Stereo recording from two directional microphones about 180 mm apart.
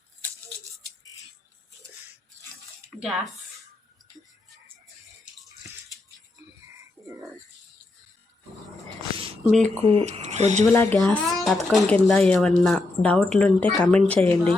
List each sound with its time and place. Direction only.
9.1 s a sound: 30° right (ahead or behind)
9.5 s a child's voice: 5° left (ahead or behind)
9.7 s speech: 35° right (ahead or behind)
10.7 s a child's voice: 10° left (ahead or behind)